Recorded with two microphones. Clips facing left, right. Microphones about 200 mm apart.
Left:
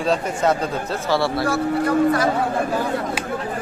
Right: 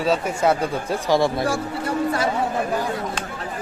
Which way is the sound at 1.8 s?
30° right (ahead or behind).